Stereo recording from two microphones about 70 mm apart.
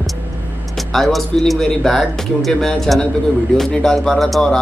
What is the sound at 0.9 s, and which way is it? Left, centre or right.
Speech, centre.